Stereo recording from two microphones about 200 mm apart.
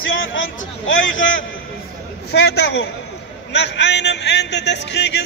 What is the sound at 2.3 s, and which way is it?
A man's voice, 55° left (ahead or behind).